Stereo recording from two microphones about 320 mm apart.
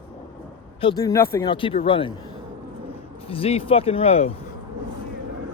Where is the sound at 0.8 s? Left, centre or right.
Centre.